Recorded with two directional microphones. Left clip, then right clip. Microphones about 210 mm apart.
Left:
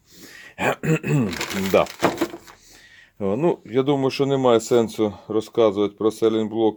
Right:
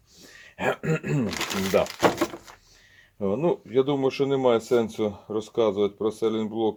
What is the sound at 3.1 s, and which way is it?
Speech, 35° left (ahead or behind).